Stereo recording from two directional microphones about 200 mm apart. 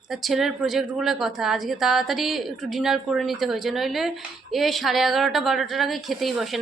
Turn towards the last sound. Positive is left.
turn(degrees=0)  # may be behind; listen again after turning